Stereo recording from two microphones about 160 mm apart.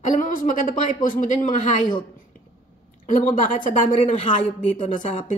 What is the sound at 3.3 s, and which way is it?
A woman's voice, 50° left (ahead or behind).